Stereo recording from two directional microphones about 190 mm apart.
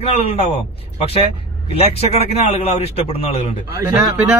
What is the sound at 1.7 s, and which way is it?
A man's voice, 30° left (ahead or behind).